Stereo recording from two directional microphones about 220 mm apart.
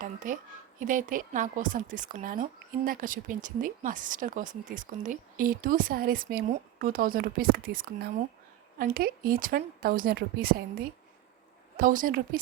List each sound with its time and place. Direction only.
0.0 s a woman's voice: 35° right (ahead or behind)
11.8 s a woman's voice: 40° right (ahead or behind)